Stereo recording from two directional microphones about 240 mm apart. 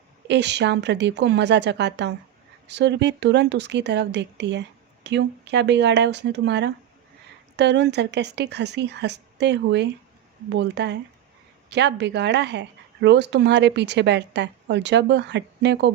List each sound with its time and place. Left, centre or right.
0.3 s speech: right